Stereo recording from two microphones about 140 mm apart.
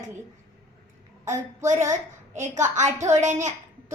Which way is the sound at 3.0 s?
60° right (ahead or behind).